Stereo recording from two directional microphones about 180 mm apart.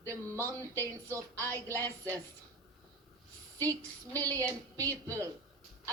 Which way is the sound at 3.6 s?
20° right (ahead or behind).